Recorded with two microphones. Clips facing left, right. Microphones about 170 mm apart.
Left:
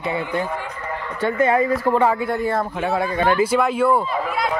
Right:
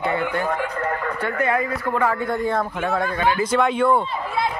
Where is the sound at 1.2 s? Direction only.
25° left (ahead or behind).